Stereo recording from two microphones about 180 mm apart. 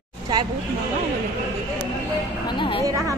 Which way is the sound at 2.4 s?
25° left (ahead or behind).